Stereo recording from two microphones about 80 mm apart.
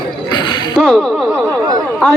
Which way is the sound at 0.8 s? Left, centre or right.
Centre.